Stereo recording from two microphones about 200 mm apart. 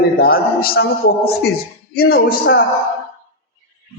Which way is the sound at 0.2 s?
45° left (ahead or behind).